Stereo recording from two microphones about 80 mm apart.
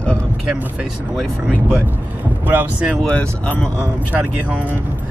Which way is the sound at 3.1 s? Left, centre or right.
Centre.